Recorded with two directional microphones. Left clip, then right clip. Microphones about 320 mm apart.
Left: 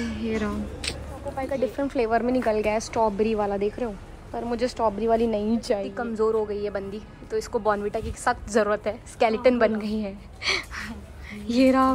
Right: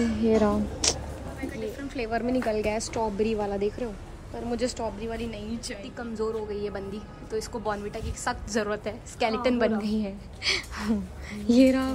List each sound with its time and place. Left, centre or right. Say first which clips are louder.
0.0 s a woman's voice: right 5 dB; centre
1.4 s speech: left 9 dB; centre